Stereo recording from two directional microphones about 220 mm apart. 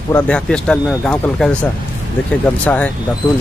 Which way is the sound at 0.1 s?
5° left (ahead or behind).